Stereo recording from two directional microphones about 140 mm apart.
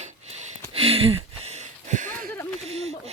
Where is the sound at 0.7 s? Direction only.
45° right (ahead or behind); by 2.3 s 65° right (ahead or behind).